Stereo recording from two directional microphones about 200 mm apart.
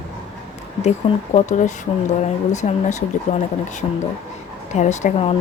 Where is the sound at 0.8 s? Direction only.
35° left (ahead or behind).